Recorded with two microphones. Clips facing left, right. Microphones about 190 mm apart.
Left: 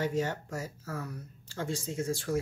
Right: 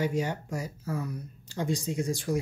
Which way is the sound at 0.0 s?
15° right (ahead or behind).